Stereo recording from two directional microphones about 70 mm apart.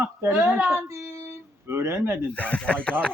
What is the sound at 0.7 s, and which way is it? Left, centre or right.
Speech, right.